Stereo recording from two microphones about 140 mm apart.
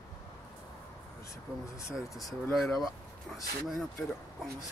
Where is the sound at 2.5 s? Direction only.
Centre (ahead or behind).